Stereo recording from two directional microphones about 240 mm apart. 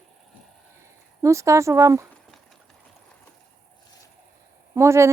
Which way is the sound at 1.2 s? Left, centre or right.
Centre.